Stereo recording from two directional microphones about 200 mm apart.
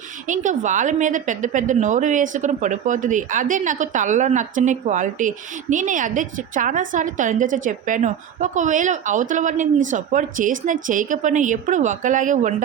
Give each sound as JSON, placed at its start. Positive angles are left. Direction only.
{"t": 0.3, "sound": "a woman's voice", "side_deg": -40}